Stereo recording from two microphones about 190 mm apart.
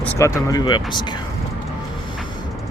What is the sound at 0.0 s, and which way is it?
Speech, 15° left (ahead or behind).